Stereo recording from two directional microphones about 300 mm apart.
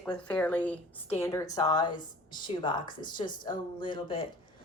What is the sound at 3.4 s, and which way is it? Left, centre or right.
Speech, centre.